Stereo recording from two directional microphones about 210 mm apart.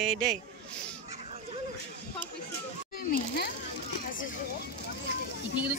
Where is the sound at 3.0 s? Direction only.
50° left (ahead or behind).